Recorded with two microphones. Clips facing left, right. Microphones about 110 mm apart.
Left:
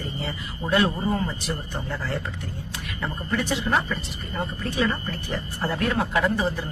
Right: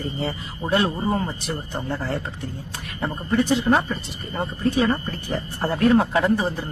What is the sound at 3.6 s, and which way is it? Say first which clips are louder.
Speech: right 4 dB; 40° right (ahead or behind).